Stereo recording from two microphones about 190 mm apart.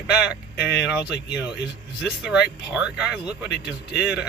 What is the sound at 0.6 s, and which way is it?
Speech, 60° left (ahead or behind).